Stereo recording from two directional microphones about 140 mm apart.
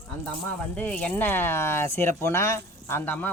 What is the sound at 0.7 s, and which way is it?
Speech, 10° left (ahead or behind).